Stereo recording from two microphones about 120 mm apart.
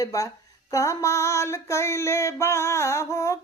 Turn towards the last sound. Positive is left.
turn(degrees=25)  # may be behind; listen again after turning